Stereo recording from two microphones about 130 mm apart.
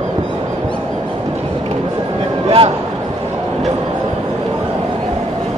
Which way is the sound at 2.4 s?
45° right (ahead or behind).